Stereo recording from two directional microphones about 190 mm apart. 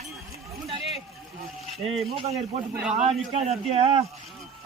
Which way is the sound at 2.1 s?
35° right (ahead or behind).